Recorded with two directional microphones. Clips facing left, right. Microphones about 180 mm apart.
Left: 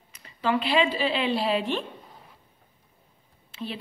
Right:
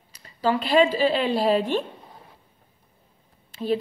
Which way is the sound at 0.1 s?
35° right (ahead or behind).